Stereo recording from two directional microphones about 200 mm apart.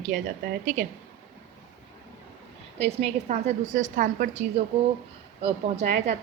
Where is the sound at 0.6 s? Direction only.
40° right (ahead or behind).